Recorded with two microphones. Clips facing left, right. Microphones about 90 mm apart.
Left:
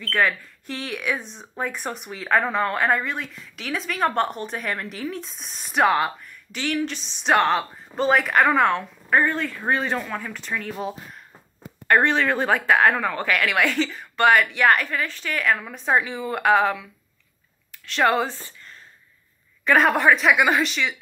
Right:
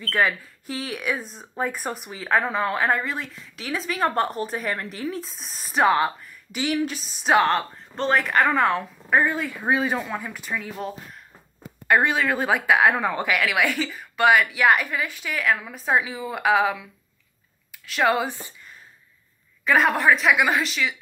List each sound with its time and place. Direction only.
0.0 s speech: 5° right (ahead or behind)
19.6 s speech: centre (ahead or behind)